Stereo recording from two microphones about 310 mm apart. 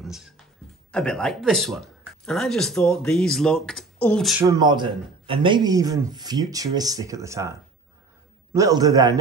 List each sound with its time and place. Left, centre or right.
0.0 s speech: centre
8.5 s a man's voice: centre